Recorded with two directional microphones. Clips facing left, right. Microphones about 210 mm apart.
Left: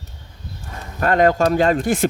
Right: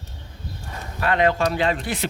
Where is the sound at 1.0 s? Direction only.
45° left (ahead or behind).